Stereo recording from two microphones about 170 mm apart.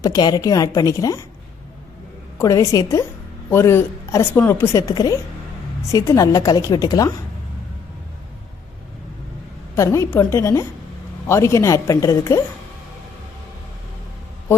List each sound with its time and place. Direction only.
0.0 s a woman's voice: 25° left (ahead or behind)
2.4 s a woman's voice: 20° left (ahead or behind)
9.7 s a woman's voice: 15° left (ahead or behind)